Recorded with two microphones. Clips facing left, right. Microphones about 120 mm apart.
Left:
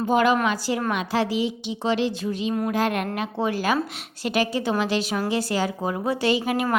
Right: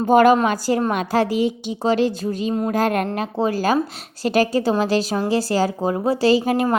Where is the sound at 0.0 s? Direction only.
45° right (ahead or behind).